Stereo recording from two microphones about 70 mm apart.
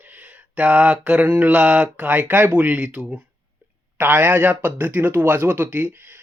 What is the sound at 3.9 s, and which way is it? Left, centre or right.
Speech, right.